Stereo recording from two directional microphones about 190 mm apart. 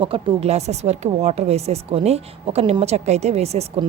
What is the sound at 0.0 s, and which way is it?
A woman's voice, 30° right (ahead or behind).